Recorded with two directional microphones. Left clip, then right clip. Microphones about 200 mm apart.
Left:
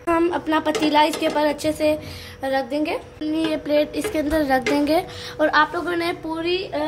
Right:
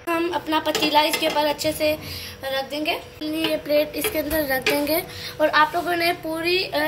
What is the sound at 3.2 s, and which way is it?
A woman's voice, 40° left (ahead or behind).